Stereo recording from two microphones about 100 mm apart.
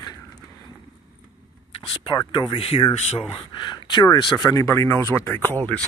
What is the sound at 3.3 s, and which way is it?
Speech, 50° left (ahead or behind).